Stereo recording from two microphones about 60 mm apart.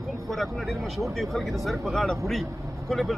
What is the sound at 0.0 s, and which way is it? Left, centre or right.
Speech, centre.